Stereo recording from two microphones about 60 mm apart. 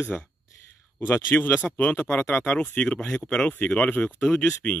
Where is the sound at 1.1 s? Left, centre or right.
Left.